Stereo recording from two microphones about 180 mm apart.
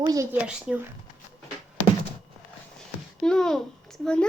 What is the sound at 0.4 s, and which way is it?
Speech, 5° right (ahead or behind).